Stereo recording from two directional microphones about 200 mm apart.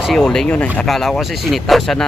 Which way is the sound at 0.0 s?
Centre (ahead or behind).